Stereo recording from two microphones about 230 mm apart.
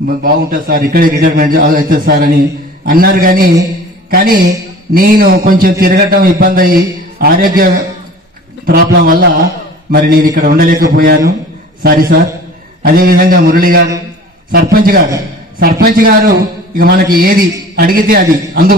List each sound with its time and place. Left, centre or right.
0.0 s a man's voice: right